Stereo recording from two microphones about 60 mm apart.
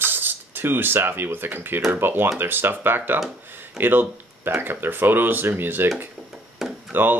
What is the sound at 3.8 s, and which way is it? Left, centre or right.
Speech, right.